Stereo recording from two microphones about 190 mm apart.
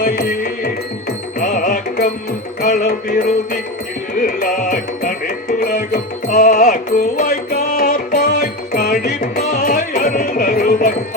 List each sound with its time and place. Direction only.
0.0 s music: 50° left (ahead or behind)